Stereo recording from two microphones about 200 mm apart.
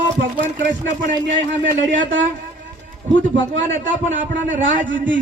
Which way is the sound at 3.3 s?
65° right (ahead or behind).